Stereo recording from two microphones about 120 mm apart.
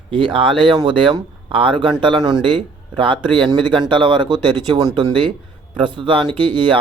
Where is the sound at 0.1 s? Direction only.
45° right (ahead or behind).